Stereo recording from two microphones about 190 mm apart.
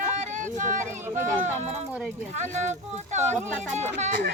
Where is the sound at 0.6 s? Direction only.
40° right (ahead or behind).